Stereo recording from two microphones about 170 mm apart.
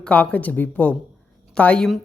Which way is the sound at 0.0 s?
10° left (ahead or behind).